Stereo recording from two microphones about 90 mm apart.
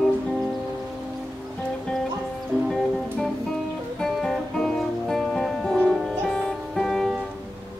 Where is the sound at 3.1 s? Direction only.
5° left (ahead or behind).